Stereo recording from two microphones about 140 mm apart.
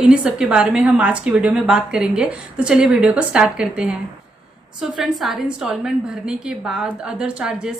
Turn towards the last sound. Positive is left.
turn(degrees=-5)  # may be behind; listen again after turning